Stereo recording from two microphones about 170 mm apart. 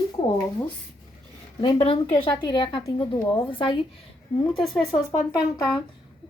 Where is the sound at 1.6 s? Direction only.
35° left (ahead or behind).